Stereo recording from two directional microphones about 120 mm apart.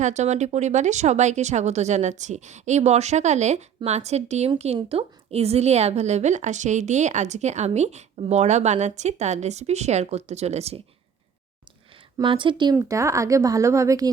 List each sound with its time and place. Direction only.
0.0 s a woman's voice: 75° right (ahead or behind)
12.2 s speech: 45° right (ahead or behind)
12.7 s speech: 25° right (ahead or behind)